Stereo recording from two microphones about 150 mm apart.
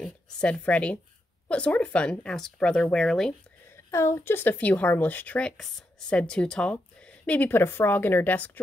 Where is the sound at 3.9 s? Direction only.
20° left (ahead or behind).